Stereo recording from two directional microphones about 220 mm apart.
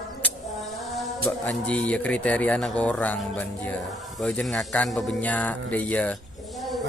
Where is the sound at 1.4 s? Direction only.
5° left (ahead or behind).